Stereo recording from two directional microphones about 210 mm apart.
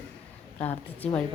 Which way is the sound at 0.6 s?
10° left (ahead or behind).